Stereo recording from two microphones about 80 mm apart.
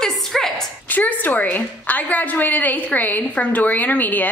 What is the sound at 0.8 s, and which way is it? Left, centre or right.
A woman's voice, left.